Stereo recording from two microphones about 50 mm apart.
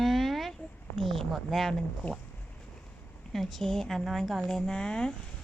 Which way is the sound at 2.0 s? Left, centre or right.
Left.